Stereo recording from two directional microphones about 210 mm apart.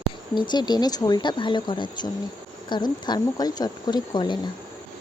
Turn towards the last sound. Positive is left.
turn(degrees=20)  # may be behind; listen again after turning